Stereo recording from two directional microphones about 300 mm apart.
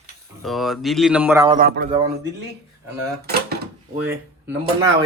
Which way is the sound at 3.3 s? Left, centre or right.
Right.